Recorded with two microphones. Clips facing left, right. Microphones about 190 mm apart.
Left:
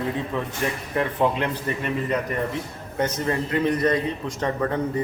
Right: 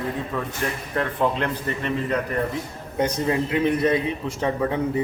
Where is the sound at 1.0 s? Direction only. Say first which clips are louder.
Left 1 dB; 10° left (ahead or behind).